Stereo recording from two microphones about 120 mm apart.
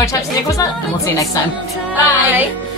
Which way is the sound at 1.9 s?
15° right (ahead or behind).